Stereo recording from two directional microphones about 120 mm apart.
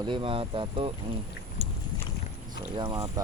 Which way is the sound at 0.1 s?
45° right (ahead or behind).